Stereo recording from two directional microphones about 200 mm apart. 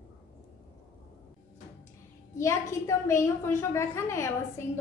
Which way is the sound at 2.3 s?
15° left (ahead or behind).